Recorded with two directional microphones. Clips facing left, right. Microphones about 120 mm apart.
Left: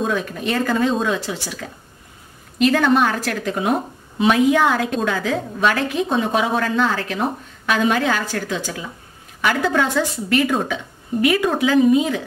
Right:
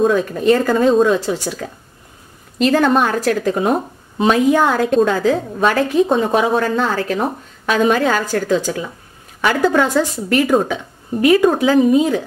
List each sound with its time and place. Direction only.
0.0 s a woman's voice: 40° right (ahead or behind)
2.6 s a woman's voice: 40° right (ahead or behind)